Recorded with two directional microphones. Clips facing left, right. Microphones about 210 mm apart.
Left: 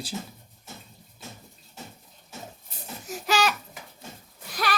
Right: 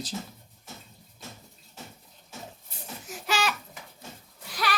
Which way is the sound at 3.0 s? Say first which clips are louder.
Left 4 dB; 40° left (ahead or behind).